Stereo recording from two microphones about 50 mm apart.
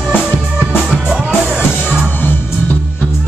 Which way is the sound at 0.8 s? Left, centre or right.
Centre.